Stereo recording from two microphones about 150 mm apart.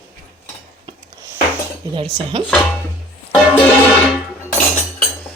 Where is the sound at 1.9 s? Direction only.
35° right (ahead or behind).